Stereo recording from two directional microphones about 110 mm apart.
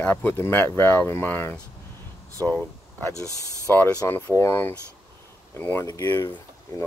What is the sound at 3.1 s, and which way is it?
Speech, 30° left (ahead or behind).